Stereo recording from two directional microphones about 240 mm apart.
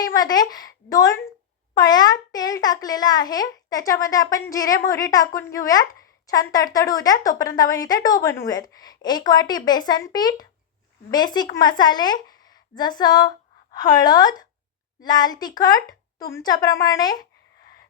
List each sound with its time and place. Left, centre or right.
0.0 s a child's voice: centre